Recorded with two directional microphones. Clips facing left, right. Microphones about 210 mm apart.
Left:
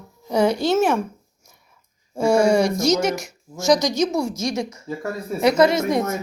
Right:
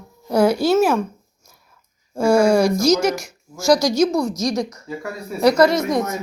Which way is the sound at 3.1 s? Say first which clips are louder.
Left 1 dB; 20° left (ahead or behind).